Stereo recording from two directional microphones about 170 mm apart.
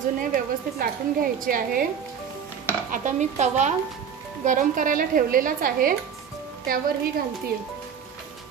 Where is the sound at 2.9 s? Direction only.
50° right (ahead or behind).